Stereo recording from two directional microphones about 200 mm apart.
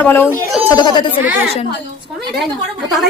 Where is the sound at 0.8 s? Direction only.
20° left (ahead or behind).